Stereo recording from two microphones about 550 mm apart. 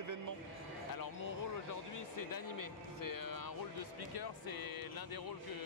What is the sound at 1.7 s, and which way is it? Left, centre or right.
Speech, left.